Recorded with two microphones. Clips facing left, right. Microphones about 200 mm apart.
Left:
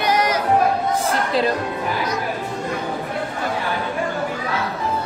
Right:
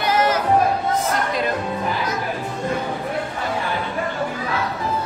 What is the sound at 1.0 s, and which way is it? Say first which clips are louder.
Music: left 2 dB; 30° left (ahead or behind).